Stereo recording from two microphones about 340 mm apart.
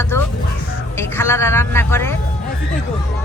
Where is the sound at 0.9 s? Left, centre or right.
Centre.